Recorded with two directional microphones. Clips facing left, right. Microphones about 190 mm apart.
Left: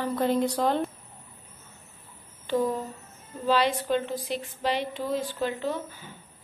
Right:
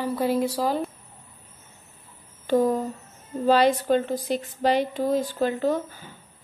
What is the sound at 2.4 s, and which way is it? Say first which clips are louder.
A woman's voice: right 5 dB; 40° right (ahead or behind).